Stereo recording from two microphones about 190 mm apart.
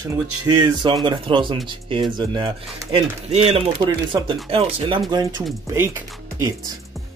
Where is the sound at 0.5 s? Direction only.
20° right (ahead or behind).